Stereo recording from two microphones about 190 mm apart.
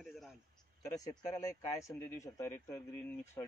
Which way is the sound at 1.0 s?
20° left (ahead or behind).